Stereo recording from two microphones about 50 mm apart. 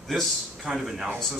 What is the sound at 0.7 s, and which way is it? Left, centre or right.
Speech, centre.